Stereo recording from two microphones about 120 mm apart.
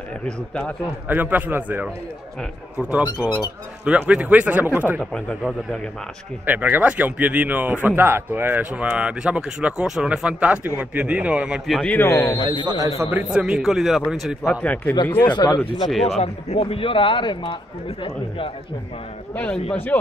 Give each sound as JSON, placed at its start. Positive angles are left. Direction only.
{"t": 0.2, "sound": "speech", "side_deg": 10}
{"t": 1.0, "sound": "speech", "side_deg": -15}
{"t": 6.4, "sound": "speech", "side_deg": -15}
{"t": 11.9, "sound": "speech", "side_deg": 20}
{"t": 12.6, "sound": "a man's voice", "side_deg": -30}
{"t": 13.1, "sound": "a man's voice", "side_deg": -10}
{"t": 14.6, "sound": "speech", "side_deg": 10}
{"t": 15.2, "sound": "speech", "side_deg": 40}
{"t": 15.9, "sound": "a man's voice", "side_deg": 0}
{"t": 16.2, "sound": "a man's voice", "side_deg": 60}
{"t": 19.3, "sound": "speech", "side_deg": 15}